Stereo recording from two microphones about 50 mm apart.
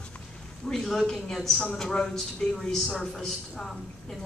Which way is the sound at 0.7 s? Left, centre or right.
Centre.